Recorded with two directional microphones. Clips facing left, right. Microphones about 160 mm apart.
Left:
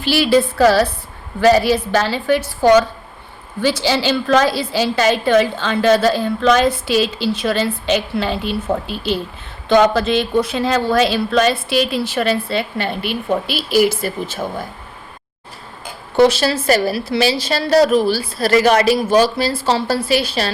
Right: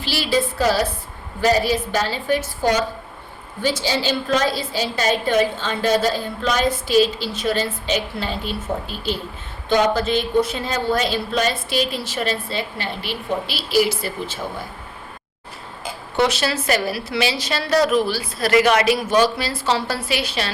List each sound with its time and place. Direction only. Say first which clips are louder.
0.0 s a woman's voice: left 7 dB; 60° left (ahead or behind)
16.1 s a woman's voice: left 7 dB; 35° left (ahead or behind)